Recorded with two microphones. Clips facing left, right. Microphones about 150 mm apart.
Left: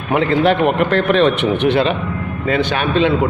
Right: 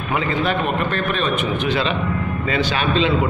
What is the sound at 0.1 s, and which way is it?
A man's voice, 70° left (ahead or behind).